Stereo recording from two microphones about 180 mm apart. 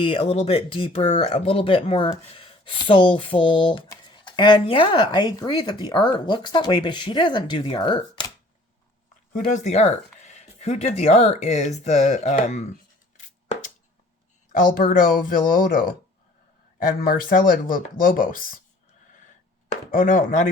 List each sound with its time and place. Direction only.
0.0 s speech: 30° left (ahead or behind)
9.5 s speech: 40° left (ahead or behind)
13.1 s a sound: 45° left (ahead or behind)
14.5 s speech: 50° left (ahead or behind)
19.9 s speech: 50° left (ahead or behind)